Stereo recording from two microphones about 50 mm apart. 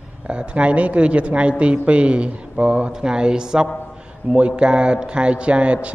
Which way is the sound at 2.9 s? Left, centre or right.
Centre.